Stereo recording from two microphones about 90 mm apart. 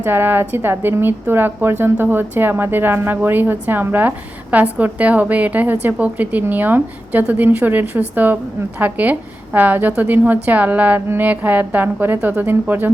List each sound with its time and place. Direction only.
0.0 s a woman's voice: 25° right (ahead or behind)